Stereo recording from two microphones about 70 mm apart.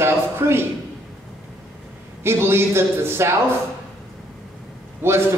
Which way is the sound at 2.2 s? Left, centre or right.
Right.